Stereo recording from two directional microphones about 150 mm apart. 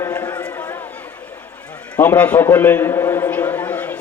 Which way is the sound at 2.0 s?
10° left (ahead or behind).